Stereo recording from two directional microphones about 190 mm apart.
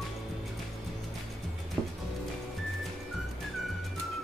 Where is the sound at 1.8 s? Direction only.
Centre (ahead or behind).